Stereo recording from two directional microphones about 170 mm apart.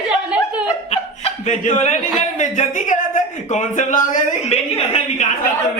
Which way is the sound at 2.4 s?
45° left (ahead or behind).